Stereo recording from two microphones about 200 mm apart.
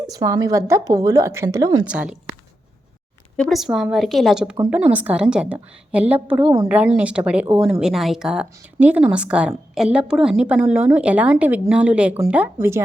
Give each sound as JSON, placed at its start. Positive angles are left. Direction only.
{"t": 0.1, "sound": "a woman's voice", "side_deg": -15}
{"t": 1.9, "sound": "speech", "side_deg": -5}
{"t": 3.3, "sound": "speech", "side_deg": 0}
{"t": 4.5, "sound": "a woman's voice", "side_deg": -15}
{"t": 6.4, "sound": "a woman's voice", "side_deg": -20}
{"t": 6.7, "sound": "a woman's voice", "side_deg": -5}